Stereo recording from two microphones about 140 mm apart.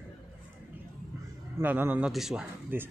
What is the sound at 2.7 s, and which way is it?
Speech, 15° right (ahead or behind).